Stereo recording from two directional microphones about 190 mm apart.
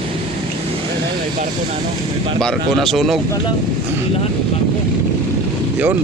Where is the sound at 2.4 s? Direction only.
Centre (ahead or behind).